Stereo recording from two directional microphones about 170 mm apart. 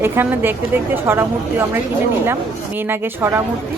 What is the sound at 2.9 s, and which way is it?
Speech, 15° right (ahead or behind).